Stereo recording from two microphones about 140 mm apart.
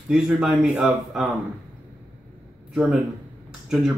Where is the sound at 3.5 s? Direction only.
5° right (ahead or behind).